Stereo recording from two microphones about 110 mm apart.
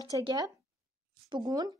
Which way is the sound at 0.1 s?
35° right (ahead or behind).